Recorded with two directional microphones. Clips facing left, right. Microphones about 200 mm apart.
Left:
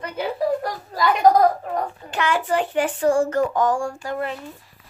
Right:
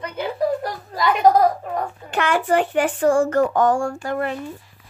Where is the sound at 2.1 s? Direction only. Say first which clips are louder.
Right 3 dB; 55° right (ahead or behind).